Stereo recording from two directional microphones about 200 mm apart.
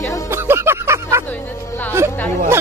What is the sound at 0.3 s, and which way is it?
Music, 10° right (ahead or behind).